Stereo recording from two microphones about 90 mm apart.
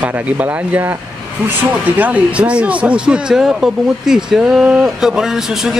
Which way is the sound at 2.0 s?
15° right (ahead or behind).